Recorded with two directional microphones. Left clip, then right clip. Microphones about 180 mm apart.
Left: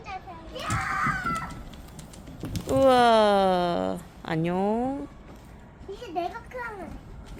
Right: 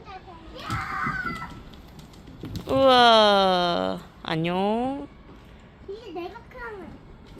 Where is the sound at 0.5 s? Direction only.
25° left (ahead or behind).